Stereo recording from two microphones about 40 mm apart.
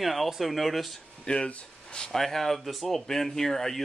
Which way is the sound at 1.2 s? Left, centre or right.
Left.